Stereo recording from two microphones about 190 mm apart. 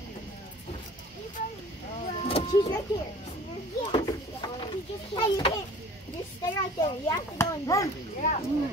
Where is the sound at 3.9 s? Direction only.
25° left (ahead or behind).